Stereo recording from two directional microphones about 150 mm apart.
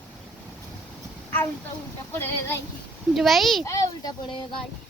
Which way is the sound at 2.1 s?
15° left (ahead or behind).